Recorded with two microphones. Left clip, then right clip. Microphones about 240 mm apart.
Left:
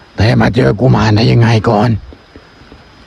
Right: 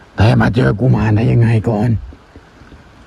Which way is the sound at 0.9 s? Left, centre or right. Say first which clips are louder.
Left 6 dB; left.